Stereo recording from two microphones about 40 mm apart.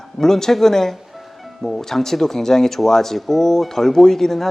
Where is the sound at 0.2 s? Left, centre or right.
Centre.